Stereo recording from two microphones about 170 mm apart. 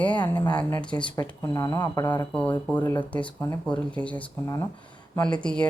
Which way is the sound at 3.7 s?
5° left (ahead or behind).